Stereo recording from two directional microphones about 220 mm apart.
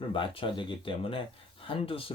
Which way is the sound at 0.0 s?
25° left (ahead or behind).